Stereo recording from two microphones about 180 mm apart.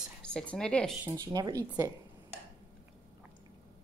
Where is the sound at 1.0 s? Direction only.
20° right (ahead or behind).